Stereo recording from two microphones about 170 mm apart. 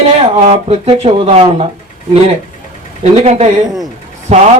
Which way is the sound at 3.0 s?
40° right (ahead or behind).